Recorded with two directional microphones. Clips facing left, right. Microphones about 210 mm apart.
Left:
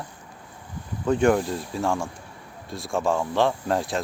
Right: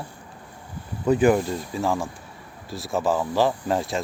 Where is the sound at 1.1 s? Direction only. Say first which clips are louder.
Right 2 dB; 5° right (ahead or behind).